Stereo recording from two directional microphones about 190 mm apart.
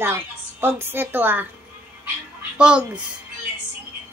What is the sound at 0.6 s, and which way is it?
Speech, 10° right (ahead or behind).